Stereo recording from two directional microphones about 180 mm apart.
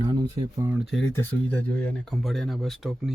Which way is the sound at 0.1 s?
25° right (ahead or behind).